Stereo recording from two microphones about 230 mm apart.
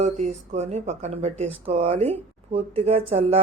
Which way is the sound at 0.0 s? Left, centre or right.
Right.